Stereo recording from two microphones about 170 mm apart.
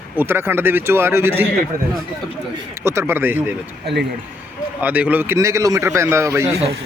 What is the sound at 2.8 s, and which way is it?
Speech, 15° right (ahead or behind).